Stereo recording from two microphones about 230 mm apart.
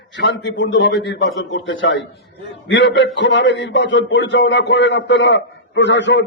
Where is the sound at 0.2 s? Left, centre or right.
Left.